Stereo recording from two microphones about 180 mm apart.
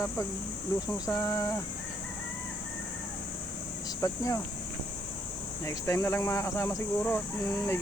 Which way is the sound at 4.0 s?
20° left (ahead or behind).